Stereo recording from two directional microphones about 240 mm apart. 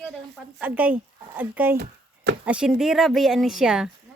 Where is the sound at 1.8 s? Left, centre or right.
Right.